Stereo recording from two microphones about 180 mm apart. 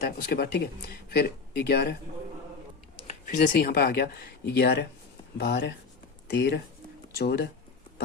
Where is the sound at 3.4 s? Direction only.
50° left (ahead or behind).